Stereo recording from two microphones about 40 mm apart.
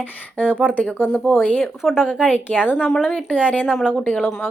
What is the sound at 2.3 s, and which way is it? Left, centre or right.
Speech, left.